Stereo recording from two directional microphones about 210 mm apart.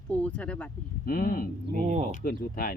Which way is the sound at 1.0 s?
45° left (ahead or behind).